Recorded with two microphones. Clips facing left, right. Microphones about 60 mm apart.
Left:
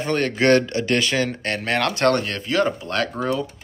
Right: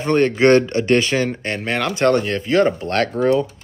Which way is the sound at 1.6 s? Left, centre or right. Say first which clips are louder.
Right 2 dB; centre.